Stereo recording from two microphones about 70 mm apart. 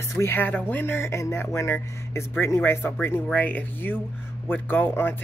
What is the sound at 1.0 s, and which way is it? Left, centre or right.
Speech, left.